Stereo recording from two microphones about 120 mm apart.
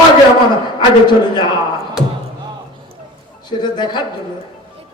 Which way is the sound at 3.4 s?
40° left (ahead or behind).